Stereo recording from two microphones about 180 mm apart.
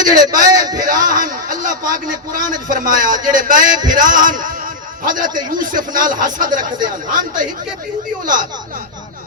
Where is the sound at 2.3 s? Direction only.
45° right (ahead or behind).